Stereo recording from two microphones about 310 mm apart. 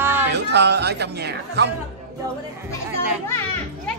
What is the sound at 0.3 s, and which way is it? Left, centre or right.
Speech, right.